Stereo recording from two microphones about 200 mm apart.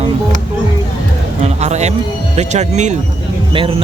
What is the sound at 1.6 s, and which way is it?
A man's voice, 35° right (ahead or behind).